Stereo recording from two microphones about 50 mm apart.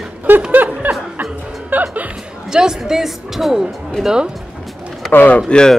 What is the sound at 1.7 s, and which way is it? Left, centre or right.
Music, right.